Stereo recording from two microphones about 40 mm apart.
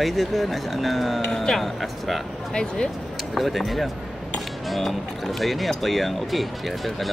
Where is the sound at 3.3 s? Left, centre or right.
Centre.